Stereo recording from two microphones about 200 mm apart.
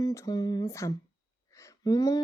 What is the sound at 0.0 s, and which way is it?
Speech, 15° left (ahead or behind).